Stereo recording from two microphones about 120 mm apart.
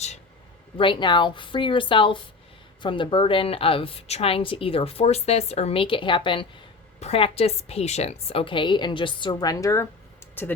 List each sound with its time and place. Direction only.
0.8 s a woman's voice: 40° left (ahead or behind)
7.0 s a woman's voice: 55° left (ahead or behind); by 10.5 s 15° left (ahead or behind)